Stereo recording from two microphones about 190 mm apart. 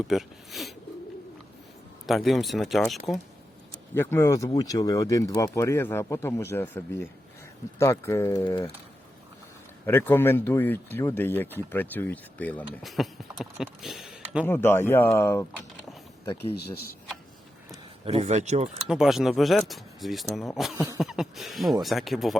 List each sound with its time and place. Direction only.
0.1 s speech: centre (ahead or behind)
2.0 s speech: centre (ahead or behind)
3.9 s speech: 10° left (ahead or behind)
9.8 s speech: 10° left (ahead or behind)
14.4 s speech: 10° left (ahead or behind)
18.0 s a man's voice: 35° right (ahead or behind)
18.9 s speech: centre (ahead or behind)